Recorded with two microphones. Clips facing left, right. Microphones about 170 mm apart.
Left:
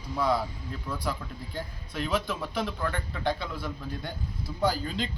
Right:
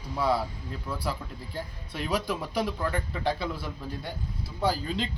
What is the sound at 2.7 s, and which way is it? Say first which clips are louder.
Speech: right 2 dB; 5° right (ahead or behind).